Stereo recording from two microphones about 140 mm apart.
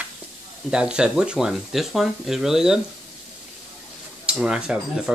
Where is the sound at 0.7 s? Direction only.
5° right (ahead or behind).